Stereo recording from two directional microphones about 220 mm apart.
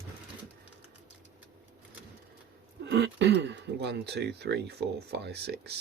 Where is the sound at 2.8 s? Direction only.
50° right (ahead or behind).